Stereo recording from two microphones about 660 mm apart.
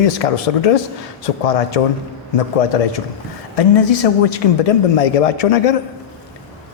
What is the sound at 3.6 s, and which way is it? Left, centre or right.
A man's voice, left.